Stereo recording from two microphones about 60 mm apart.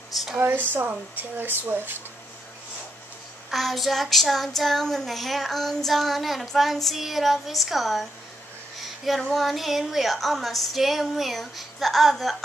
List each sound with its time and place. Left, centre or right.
0.1 s a sound: centre
0.4 s speech: right
3.4 s child singing: centre
9.3 s child singing: centre